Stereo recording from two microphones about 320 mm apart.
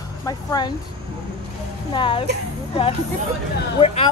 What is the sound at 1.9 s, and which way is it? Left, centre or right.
Speech, centre.